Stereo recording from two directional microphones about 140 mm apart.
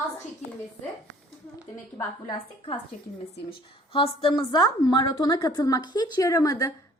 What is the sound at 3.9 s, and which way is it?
A woman's voice, 35° left (ahead or behind).